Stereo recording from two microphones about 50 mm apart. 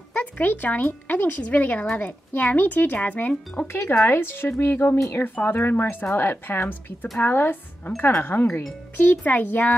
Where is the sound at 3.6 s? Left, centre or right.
Left.